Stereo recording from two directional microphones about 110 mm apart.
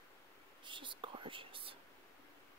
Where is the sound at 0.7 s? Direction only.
50° right (ahead or behind).